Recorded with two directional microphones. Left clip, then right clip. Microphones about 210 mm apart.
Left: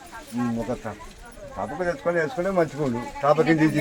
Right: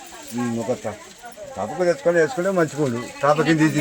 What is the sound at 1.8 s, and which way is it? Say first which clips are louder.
Speech: right 7 dB; 45° right (ahead or behind).